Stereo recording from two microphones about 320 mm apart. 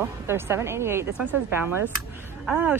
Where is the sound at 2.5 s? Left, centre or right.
Centre.